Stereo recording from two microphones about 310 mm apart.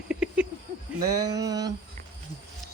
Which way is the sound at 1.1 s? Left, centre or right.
Centre.